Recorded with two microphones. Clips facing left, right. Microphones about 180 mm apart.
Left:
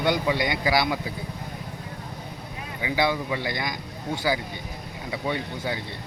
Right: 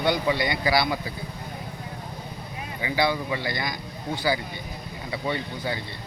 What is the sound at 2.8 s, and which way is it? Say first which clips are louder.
Speech: even; 10° left (ahead or behind).